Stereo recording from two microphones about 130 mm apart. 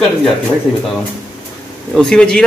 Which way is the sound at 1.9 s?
5° left (ahead or behind).